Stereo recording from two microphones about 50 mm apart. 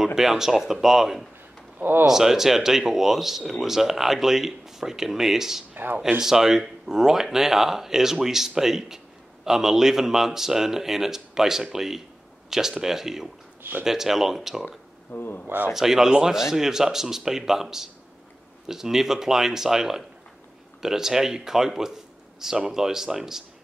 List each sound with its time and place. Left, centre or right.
0.0 s speech: centre
1.8 s speech: right
2.0 s a man's voice: centre
13.6 s a sound: right
13.8 s speech: centre
15.0 s speech: left
15.4 s a man's voice: right
15.7 s speech: centre